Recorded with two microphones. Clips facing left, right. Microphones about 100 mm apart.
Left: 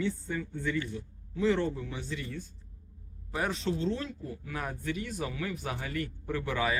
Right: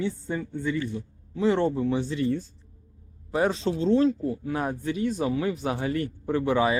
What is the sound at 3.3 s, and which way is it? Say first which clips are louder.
Speech: right 7 dB; 25° right (ahead or behind).